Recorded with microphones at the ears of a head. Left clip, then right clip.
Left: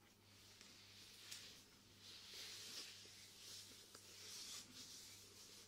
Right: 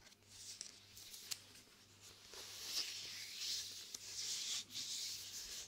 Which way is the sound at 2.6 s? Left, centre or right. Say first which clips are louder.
Right 10 dB; right.